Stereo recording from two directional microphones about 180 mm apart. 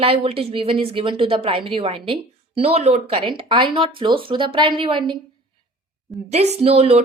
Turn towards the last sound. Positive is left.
turn(degrees=-35)  # may be behind; listen again after turning